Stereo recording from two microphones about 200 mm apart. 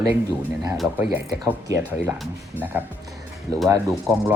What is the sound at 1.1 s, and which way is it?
Speech, 15° right (ahead or behind).